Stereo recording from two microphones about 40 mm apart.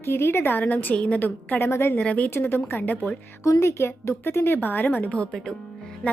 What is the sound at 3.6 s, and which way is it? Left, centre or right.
Speech, left.